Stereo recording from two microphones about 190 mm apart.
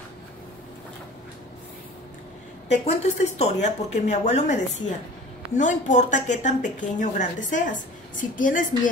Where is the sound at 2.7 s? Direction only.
35° left (ahead or behind).